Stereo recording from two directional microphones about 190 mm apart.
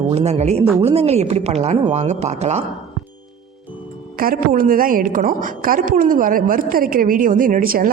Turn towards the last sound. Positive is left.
turn(degrees=-50)  # may be behind; listen again after turning